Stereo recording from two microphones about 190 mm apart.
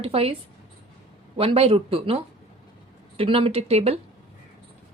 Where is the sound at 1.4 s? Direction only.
30° right (ahead or behind).